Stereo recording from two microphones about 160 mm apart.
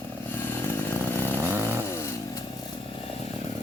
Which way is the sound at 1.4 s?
15° right (ahead or behind).